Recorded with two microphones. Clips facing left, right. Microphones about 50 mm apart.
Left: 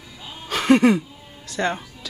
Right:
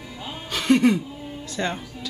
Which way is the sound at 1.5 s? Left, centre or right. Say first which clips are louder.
Left 4 dB; left.